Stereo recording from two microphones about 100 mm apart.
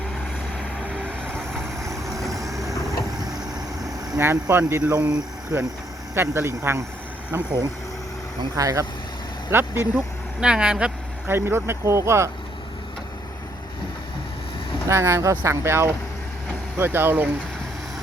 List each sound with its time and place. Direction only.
4.2 s speech: 25° right (ahead or behind)
5.5 s speech: 25° right (ahead or behind)
8.5 s speech: 35° right (ahead or behind)
9.5 s speech: 20° right (ahead or behind)
10.4 s speech: 10° right (ahead or behind)
11.3 s speech: 25° right (ahead or behind)
14.8 s speech: 30° right (ahead or behind)